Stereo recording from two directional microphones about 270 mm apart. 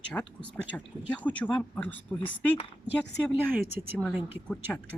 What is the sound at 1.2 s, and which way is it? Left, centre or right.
Speech, centre.